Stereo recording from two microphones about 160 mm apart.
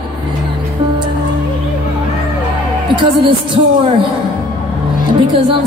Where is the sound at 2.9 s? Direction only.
30° right (ahead or behind).